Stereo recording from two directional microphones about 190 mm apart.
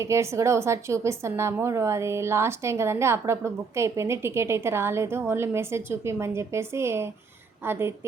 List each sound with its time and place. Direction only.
0.0 s speech: 15° right (ahead or behind)